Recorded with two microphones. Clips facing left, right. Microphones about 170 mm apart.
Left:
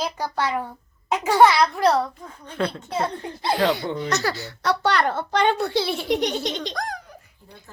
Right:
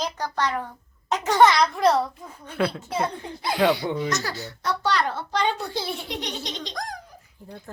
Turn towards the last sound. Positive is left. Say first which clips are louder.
# left 4 dB
turn(degrees=65)  # may be behind; listen again after turning